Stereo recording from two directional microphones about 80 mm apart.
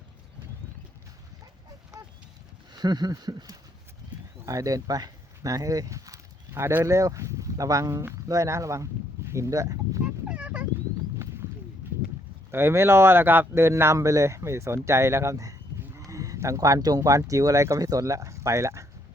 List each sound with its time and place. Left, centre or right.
2.7 s speech: right
4.4 s speech: right
10.2 s a sound: centre
12.5 s speech: right